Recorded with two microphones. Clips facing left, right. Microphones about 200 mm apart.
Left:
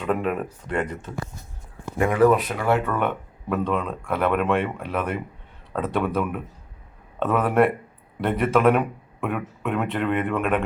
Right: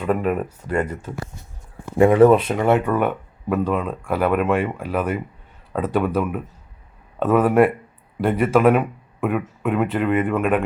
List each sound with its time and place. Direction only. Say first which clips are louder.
0.0 s speech: right 3 dB; 5° right (ahead or behind)
2.0 s speech: right 6 dB; 25° right (ahead or behind)
2.9 s speech: right 4 dB; 5° right (ahead or behind)
7.2 s speech: right 4 dB; centre (ahead or behind)